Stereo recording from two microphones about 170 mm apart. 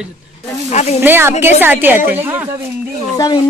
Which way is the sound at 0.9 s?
15° right (ahead or behind).